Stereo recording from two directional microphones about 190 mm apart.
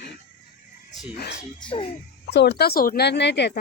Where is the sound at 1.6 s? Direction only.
25° left (ahead or behind).